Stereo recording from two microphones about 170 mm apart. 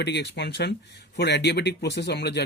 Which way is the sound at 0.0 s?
85° left.